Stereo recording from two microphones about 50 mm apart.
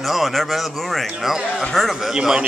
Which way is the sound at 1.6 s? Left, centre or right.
Centre.